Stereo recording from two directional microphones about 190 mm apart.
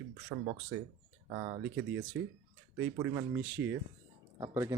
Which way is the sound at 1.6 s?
70° right (ahead or behind).